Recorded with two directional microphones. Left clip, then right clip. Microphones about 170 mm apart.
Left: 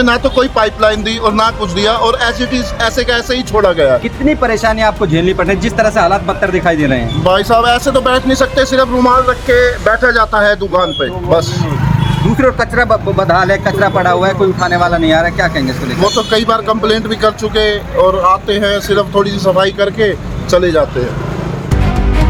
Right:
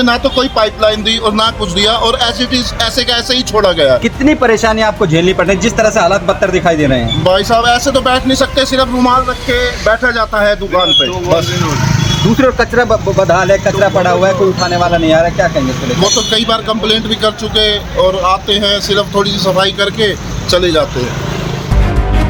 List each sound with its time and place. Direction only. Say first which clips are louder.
0.0 s speech: left 1 dB; 10° left (ahead or behind)
4.0 s speech: right 3 dB; 40° right (ahead or behind)
7.3 s a man's voice: even; 10° left (ahead or behind)
12.5 s speech: right 1 dB; 25° right (ahead or behind)
14.3 s speech: right 1 dB; 20° right (ahead or behind)
16.0 s a man's voice: even; centre (ahead or behind)